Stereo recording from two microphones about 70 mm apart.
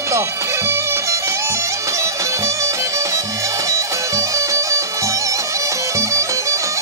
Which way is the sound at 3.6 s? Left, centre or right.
Right.